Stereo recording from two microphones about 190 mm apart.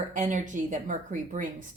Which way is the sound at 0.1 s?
40° right (ahead or behind).